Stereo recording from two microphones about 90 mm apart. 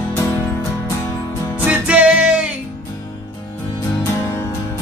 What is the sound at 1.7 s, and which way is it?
Music, 15° right (ahead or behind).